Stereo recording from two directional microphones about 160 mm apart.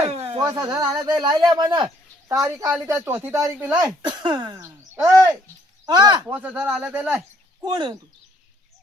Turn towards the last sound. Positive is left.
turn(degrees=-30)  # may be behind; listen again after turning